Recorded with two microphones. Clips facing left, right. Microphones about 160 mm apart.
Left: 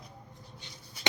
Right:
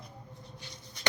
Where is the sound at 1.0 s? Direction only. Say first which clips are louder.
Even; 5° left (ahead or behind).